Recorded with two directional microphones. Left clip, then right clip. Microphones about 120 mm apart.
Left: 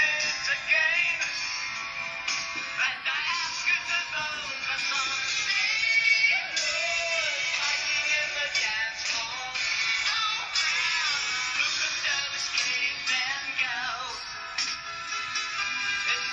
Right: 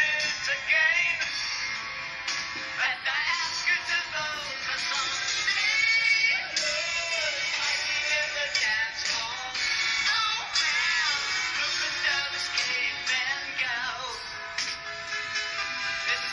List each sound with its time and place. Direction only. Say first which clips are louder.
0.0 s music: even; 10° right (ahead or behind)
2.8 s music: right 1 dB; 25° right (ahead or behind)
4.8 s music: even; 35° right (ahead or behind)